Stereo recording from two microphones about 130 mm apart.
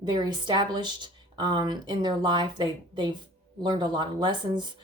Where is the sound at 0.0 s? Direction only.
35° right (ahead or behind).